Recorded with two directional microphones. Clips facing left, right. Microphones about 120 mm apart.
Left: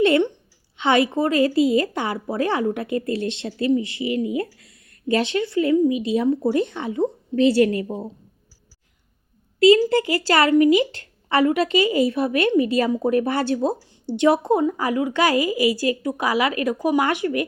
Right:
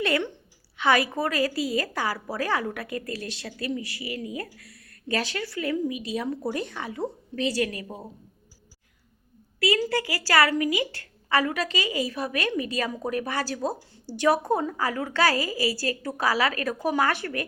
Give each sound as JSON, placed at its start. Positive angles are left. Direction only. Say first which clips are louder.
{"t": 0.0, "sound": "a woman's voice", "louder": "left 9 dB", "side_deg": 20}
{"t": 9.6, "sound": "a woman's voice", "louder": "left 10 dB", "side_deg": 25}